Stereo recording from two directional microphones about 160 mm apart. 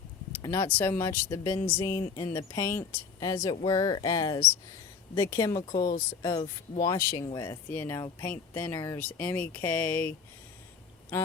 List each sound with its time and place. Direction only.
0.4 s speech: 15° left (ahead or behind)
7.4 s speech: 15° left (ahead or behind)
11.1 s speech: 15° left (ahead or behind)